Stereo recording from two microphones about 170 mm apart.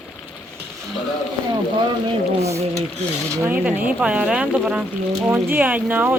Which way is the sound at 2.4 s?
40° right (ahead or behind).